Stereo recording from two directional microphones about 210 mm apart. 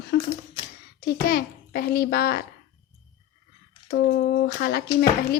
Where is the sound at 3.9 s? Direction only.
50° left (ahead or behind).